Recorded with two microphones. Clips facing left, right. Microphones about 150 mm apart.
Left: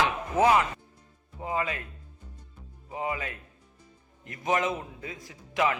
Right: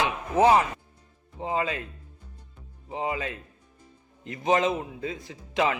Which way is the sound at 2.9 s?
25° right (ahead or behind).